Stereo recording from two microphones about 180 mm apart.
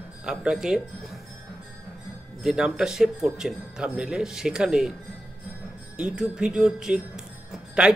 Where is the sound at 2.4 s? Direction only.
Centre (ahead or behind).